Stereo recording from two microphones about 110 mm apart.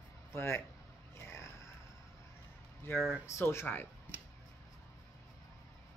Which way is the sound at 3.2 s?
25° left (ahead or behind).